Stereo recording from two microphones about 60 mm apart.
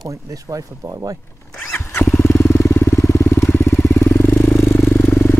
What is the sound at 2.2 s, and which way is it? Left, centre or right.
Vehicle, left.